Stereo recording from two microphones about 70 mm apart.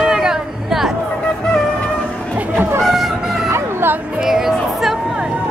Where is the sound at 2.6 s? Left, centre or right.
Right.